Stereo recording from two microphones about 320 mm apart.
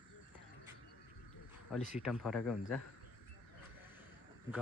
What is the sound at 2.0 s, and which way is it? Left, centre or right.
Speech, centre.